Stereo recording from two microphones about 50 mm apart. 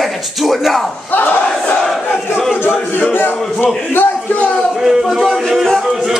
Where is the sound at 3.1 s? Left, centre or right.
Left.